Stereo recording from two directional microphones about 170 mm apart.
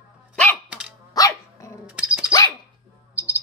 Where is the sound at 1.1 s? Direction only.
20° left (ahead or behind).